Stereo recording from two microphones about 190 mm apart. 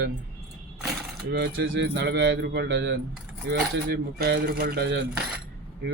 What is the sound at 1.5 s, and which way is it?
A man's voice, 80° right.